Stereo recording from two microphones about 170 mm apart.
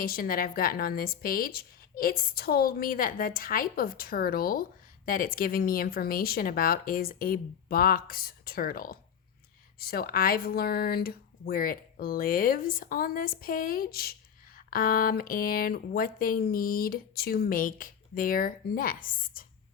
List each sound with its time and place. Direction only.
0.0 s speech: 60° left (ahead or behind)